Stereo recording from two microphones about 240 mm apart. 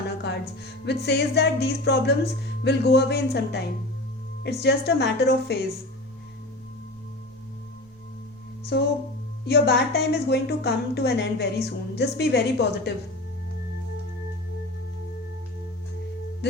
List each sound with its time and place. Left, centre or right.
0.2 s music: left
1.0 s a woman's voice: left
8.7 s a woman's voice: left
16.4 s music: left